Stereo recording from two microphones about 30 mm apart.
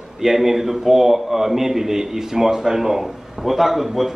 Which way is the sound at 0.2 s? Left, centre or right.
Centre.